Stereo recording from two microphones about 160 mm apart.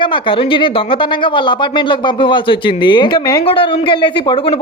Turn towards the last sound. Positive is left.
turn(degrees=30)  # may be behind; listen again after turning